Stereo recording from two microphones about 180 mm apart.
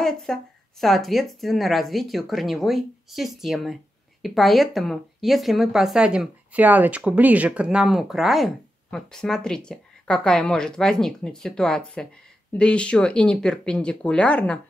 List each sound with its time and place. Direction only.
0.0 s a woman's voice: centre (ahead or behind)